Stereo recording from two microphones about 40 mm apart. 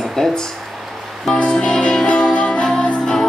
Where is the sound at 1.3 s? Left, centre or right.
Centre.